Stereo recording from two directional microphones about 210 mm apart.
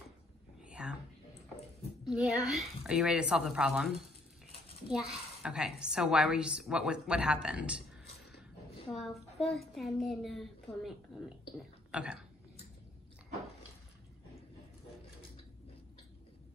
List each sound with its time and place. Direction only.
0.6 s whispering: 5° right (ahead or behind)
2.0 s a woman's voice: centre (ahead or behind)
8.9 s a woman's voice: centre (ahead or behind)